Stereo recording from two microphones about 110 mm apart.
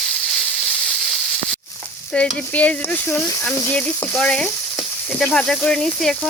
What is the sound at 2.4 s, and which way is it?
Speech, 15° left (ahead or behind).